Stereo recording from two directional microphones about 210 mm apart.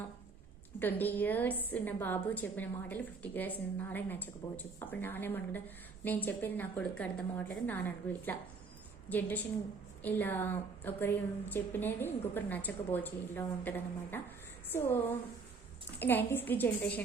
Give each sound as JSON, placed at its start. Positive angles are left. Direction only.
{"t": 0.8, "sound": "a woman's voice", "side_deg": 10}
{"t": 16.0, "sound": "a woman's voice", "side_deg": 10}